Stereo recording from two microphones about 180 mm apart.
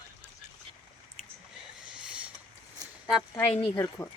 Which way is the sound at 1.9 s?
5° right (ahead or behind).